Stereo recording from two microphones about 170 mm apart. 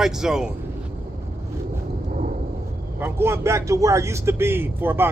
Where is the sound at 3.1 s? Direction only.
15° right (ahead or behind).